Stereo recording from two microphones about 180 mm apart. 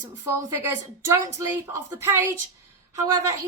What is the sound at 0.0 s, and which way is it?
A woman's voice, 15° right (ahead or behind).